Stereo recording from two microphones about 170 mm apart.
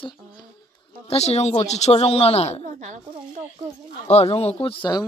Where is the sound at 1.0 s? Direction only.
40° left (ahead or behind).